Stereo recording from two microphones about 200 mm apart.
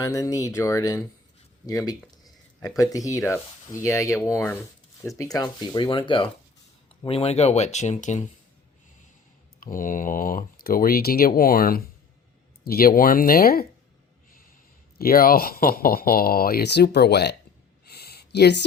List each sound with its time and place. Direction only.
0.0 s speech: 15° left (ahead or behind); by 8.2 s 35° left (ahead or behind)
9.6 s speech: 45° left (ahead or behind)
14.9 s speech: 45° left (ahead or behind)
17.8 s a sound: 55° left (ahead or behind)